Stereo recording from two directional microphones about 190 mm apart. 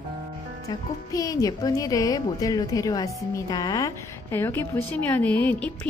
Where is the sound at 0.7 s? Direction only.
20° left (ahead or behind).